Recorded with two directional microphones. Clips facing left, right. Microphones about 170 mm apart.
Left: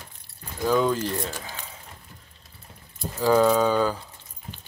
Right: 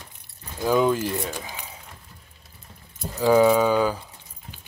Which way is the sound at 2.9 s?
20° right (ahead or behind).